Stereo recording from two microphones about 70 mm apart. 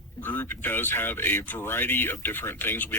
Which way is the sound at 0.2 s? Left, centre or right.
Left.